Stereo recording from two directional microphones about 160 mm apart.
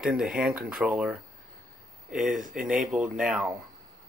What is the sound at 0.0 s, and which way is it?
Speech, 5° right (ahead or behind).